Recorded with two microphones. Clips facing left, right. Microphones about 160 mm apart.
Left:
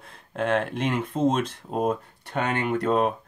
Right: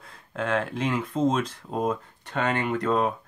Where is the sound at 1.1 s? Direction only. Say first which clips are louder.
Left 1 dB; 10° left (ahead or behind).